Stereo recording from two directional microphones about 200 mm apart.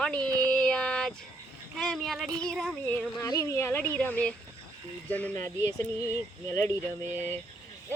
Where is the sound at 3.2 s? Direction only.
20° left (ahead or behind).